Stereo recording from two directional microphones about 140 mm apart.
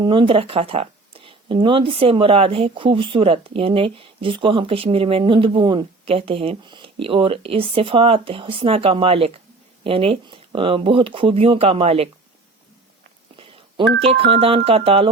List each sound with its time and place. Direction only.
0.0 s speech: 35° right (ahead or behind)
13.3 s speech: 40° right (ahead or behind)